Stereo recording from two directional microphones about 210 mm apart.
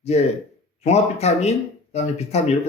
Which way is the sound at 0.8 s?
30° left (ahead or behind).